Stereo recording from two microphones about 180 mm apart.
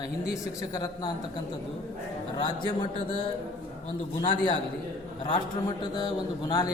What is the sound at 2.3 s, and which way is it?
Speech, 25° left (ahead or behind).